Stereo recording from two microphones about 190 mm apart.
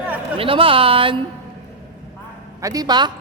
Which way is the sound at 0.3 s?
30° right (ahead or behind).